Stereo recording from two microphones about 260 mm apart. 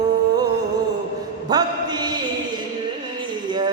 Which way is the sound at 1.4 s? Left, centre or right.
Centre.